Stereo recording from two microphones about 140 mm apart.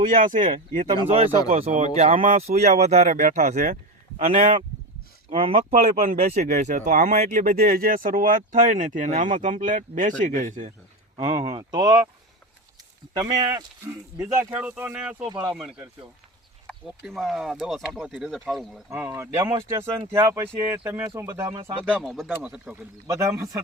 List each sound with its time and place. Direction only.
0.0 s speech: 70° right (ahead or behind)
1.1 s speech: 40° right (ahead or behind); by 3.8 s 60° right (ahead or behind)
4.2 s speech: 45° right (ahead or behind)
11.3 s speech: 30° right (ahead or behind)
13.1 s speech: 30° right (ahead or behind); by 18.8 s centre (ahead or behind)
18.9 s speech: 15° right (ahead or behind)
21.8 s speech: 5° left (ahead or behind)
23.0 s speech: 20° right (ahead or behind)